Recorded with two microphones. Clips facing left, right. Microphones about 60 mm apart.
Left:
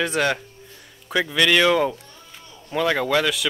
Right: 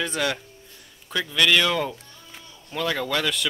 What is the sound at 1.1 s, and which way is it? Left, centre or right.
A man's voice, centre.